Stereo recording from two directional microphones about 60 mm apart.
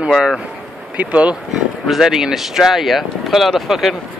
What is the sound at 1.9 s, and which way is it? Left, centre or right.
Speech, centre.